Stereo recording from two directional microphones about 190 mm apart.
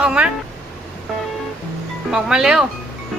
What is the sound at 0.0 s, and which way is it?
Speech, 5° right (ahead or behind).